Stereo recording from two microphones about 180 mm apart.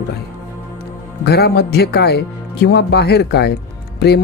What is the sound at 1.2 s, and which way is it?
Speech, 60° left (ahead or behind).